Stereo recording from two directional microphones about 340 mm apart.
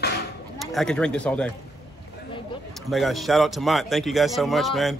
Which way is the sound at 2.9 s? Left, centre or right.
Centre.